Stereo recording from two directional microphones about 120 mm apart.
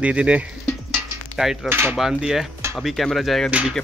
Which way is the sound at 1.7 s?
20° right (ahead or behind).